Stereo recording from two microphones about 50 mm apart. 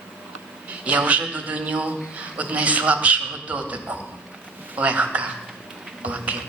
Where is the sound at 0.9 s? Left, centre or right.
Right.